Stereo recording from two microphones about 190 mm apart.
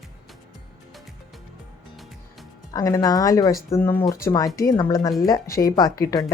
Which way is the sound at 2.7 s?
20° left (ahead or behind).